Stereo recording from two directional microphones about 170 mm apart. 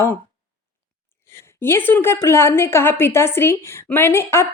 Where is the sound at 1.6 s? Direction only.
15° left (ahead or behind).